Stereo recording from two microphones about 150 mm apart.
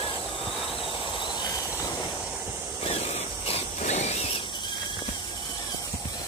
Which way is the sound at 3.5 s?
45° left (ahead or behind).